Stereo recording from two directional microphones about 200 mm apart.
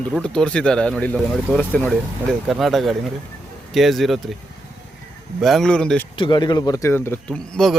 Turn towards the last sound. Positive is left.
turn(degrees=5)  # may be behind; listen again after turning